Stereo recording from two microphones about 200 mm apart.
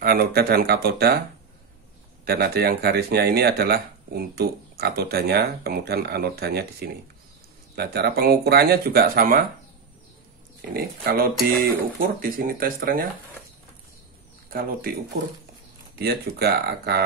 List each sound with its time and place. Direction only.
0.0 s speech: 50° right (ahead or behind)
2.2 s speech: 50° right (ahead or behind)
10.7 s speech: 50° right (ahead or behind)
14.5 s speech: 45° right (ahead or behind)
16.0 s speech: 50° right (ahead or behind)